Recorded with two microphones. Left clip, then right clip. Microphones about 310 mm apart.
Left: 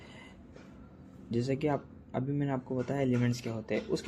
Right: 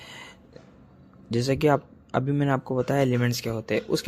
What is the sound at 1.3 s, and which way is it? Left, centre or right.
Speech, right.